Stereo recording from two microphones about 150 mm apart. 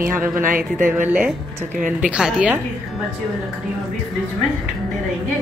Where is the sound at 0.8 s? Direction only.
15° right (ahead or behind).